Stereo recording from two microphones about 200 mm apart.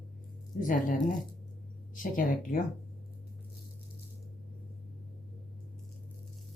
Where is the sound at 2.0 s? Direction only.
40° left (ahead or behind).